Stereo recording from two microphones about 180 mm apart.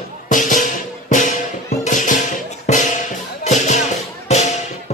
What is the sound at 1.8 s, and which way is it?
Music, 45° left (ahead or behind).